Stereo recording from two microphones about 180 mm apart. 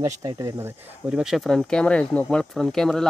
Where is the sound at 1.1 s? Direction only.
5° right (ahead or behind).